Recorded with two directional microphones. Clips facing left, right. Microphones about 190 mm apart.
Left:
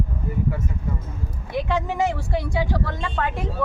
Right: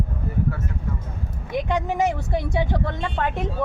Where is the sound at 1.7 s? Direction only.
15° right (ahead or behind).